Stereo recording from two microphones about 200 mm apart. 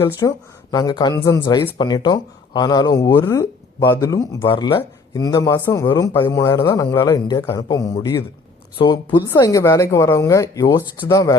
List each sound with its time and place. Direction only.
0.0 s speech: 15° left (ahead or behind)